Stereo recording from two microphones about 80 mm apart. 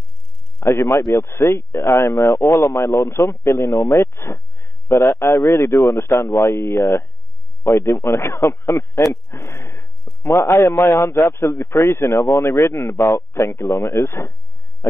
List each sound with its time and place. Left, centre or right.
0.6 s speech: left
10.8 s speech: left